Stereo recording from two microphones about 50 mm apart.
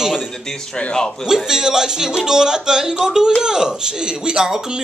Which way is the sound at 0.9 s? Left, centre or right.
Centre.